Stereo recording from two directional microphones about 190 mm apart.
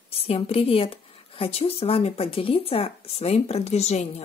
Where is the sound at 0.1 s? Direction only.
30° left (ahead or behind).